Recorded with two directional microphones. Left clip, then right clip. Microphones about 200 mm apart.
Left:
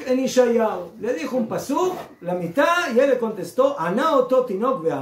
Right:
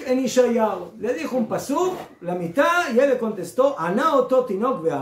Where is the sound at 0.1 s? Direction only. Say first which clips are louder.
Left 1 dB; 10° right (ahead or behind).